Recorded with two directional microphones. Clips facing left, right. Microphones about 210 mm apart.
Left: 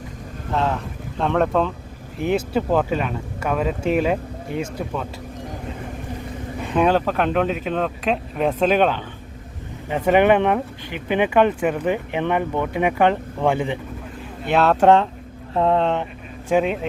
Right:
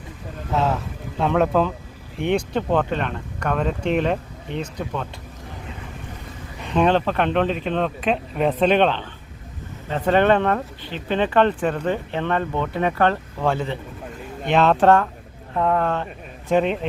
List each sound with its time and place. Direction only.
0.5 s speech: 5° right (ahead or behind)
6.7 s speech: 5° left (ahead or behind)
14.4 s speech: 5° left (ahead or behind)
14.8 s speech: 20° left (ahead or behind)
16.5 s speech: 5° left (ahead or behind)